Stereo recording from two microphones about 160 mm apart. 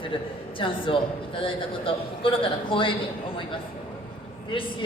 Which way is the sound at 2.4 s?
30° left (ahead or behind).